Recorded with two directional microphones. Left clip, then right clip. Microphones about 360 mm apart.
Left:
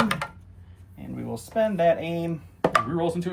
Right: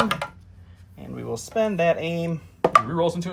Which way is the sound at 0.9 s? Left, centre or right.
Right.